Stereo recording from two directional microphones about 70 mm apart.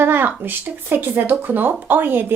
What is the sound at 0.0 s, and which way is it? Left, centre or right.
A woman's voice, right.